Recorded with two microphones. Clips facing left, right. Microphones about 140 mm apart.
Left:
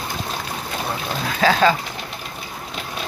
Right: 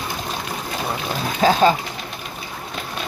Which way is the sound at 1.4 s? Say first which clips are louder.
Right 1 dB; 20° right (ahead or behind).